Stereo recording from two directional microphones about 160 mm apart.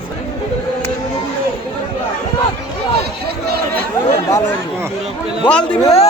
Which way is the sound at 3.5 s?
75° right (ahead or behind).